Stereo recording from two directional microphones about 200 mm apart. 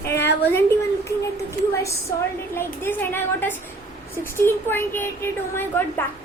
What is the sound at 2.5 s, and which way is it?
A woman's voice, 10° left (ahead or behind).